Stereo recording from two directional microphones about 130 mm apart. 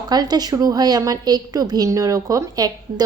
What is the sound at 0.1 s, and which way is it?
A woman's voice, 30° right (ahead or behind).